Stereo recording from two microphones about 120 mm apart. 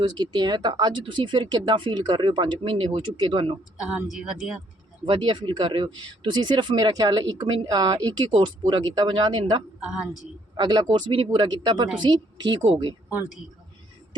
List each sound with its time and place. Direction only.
0.0 s speech: 35° right (ahead or behind)
3.8 s speech: 10° right (ahead or behind)
5.0 s speech: 45° right (ahead or behind)
9.8 s speech: 5° right (ahead or behind)
10.6 s speech: 35° right (ahead or behind)
10.8 s speech: 45° right (ahead or behind)